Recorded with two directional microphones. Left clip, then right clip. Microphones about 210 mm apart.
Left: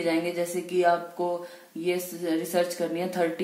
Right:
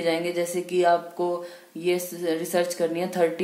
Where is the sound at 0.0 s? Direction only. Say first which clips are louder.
Right 2 dB; 40° right (ahead or behind).